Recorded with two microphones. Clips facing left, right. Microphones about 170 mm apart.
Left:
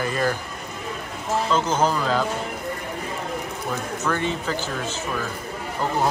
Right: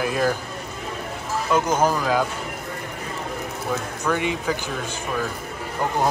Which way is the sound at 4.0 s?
10° right (ahead or behind).